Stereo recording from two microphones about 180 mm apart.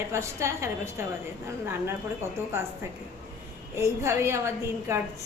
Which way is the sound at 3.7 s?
15° right (ahead or behind).